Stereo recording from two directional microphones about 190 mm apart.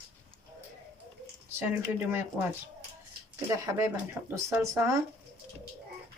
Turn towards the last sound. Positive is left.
turn(degrees=-15)  # may be behind; listen again after turning